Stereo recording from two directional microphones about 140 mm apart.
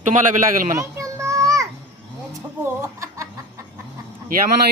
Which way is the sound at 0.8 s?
20° right (ahead or behind).